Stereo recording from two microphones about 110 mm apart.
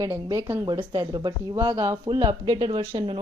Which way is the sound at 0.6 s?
45° right (ahead or behind).